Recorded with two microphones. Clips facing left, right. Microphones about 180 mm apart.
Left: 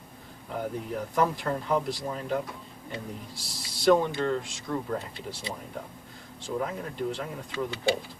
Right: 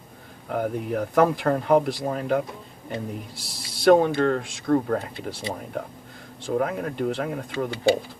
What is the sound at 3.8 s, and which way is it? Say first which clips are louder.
Speech: right 6 dB; 60° right (ahead or behind).